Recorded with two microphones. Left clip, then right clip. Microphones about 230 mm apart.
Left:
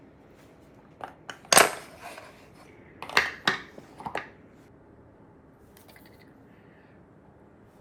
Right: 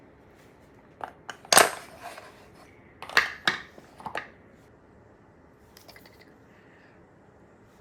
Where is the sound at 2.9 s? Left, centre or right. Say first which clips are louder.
Right 1 dB; centre.